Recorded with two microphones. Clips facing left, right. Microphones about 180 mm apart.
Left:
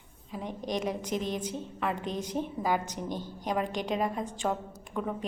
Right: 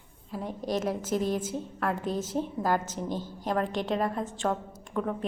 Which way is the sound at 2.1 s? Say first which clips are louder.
Right 2 dB; 15° left (ahead or behind).